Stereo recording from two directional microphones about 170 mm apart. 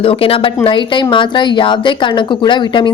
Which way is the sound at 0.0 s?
35° left (ahead or behind).